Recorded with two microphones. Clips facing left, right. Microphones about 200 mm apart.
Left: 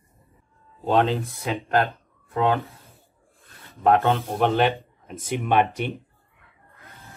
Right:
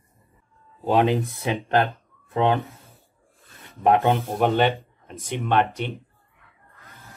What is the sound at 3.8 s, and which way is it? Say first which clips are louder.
Speech: even; 15° right (ahead or behind).